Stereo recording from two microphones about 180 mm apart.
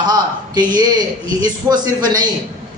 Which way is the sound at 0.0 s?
20° right (ahead or behind).